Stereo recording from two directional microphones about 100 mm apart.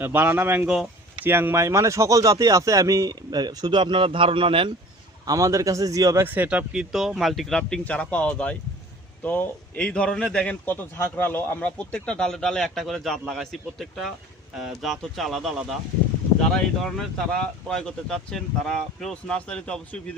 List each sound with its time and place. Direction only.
0.0 s speech: 20° right (ahead or behind); by 4.7 s 60° right (ahead or behind)
5.2 s speech: 35° right (ahead or behind)
6.2 s a man's voice: 20° right (ahead or behind); by 20.0 s 10° left (ahead or behind)